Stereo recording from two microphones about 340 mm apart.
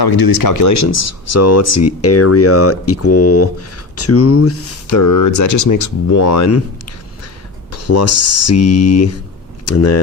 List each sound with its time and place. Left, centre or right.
0.0 s speech: left